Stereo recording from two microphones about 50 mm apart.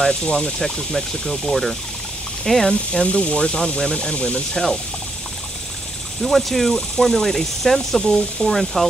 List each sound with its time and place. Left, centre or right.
0.0 s speech: centre
0.6 s speech: centre
2.7 s speech: centre
6.2 s speech: centre